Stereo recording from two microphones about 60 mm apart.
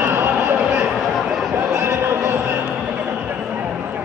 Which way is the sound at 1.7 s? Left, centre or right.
Right.